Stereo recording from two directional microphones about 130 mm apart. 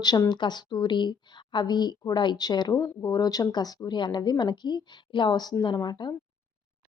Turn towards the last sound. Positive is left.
turn(degrees=35)  # may be behind; listen again after turning